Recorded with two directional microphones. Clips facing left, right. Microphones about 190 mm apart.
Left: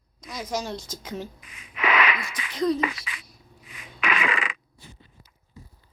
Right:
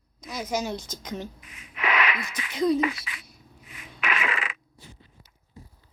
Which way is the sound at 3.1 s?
90° left.